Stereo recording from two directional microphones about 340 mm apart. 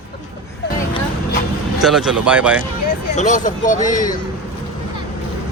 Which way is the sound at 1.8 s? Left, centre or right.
Centre.